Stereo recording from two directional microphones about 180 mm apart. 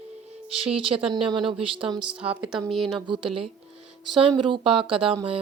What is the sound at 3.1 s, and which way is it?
Speech, 30° right (ahead or behind).